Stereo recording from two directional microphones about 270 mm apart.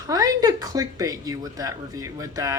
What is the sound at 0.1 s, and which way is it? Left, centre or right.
Speech, centre.